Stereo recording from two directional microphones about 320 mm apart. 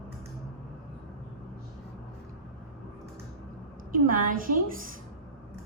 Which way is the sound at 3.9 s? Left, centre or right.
Right.